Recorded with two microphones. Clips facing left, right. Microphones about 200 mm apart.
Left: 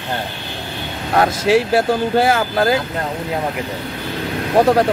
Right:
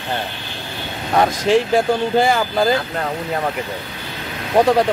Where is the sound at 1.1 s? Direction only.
5° left (ahead or behind).